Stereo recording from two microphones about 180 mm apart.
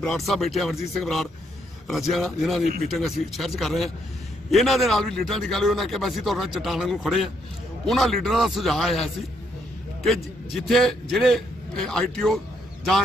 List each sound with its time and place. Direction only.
0.0 s a man's voice: centre (ahead or behind)
10.7 s a man's voice: centre (ahead or behind)